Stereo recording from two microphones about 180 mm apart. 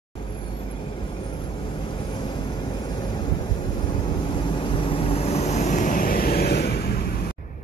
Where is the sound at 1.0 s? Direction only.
30° left (ahead or behind); by 7.3 s 55° left (ahead or behind).